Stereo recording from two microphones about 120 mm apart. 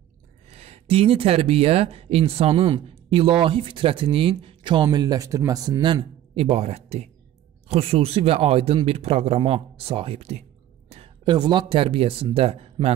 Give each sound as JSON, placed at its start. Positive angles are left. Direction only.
{"t": 0.5, "sound": "speech", "side_deg": -60}
{"t": 4.8, "sound": "speech", "side_deg": -35}
{"t": 6.3, "sound": "speech", "side_deg": -55}
{"t": 11.2, "sound": "speech", "side_deg": -40}